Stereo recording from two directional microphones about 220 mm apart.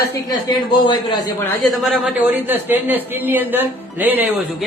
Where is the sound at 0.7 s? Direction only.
20° left (ahead or behind).